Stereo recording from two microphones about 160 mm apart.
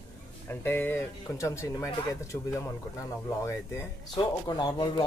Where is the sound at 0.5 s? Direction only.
15° left (ahead or behind).